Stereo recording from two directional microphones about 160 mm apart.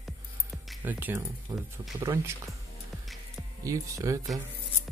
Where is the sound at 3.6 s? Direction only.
20° right (ahead or behind).